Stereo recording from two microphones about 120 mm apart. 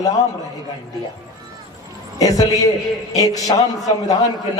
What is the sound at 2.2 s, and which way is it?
A man's voice, 30° left (ahead or behind).